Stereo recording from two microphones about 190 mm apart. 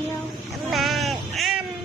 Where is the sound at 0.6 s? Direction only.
Centre (ahead or behind).